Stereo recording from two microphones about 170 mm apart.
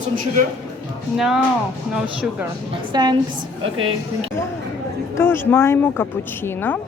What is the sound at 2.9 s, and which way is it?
Speech, 25° right (ahead or behind).